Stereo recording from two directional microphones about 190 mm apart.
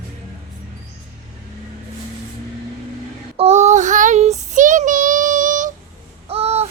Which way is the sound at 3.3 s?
35° right (ahead or behind).